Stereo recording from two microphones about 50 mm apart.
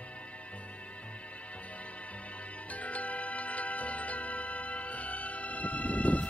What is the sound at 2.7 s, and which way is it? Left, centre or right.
Music, left.